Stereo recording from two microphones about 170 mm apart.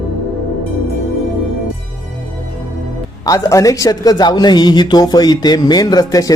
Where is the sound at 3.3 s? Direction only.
20° left (ahead or behind).